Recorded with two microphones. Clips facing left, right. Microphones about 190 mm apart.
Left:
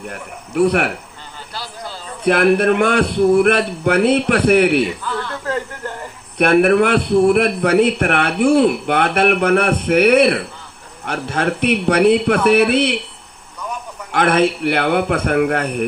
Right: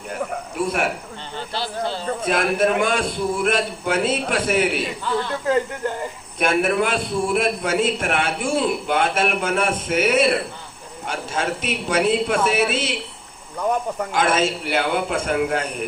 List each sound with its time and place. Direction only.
0.1 s a man's voice: 65° left (ahead or behind)
2.2 s a man's voice: 65° left (ahead or behind)
5.1 s speech: 20° right (ahead or behind)
6.3 s a man's voice: 65° left (ahead or behind)
14.1 s a man's voice: 60° left (ahead or behind)